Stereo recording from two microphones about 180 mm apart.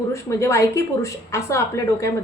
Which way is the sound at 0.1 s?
15° left (ahead or behind).